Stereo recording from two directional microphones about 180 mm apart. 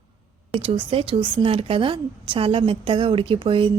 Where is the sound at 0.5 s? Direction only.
30° right (ahead or behind).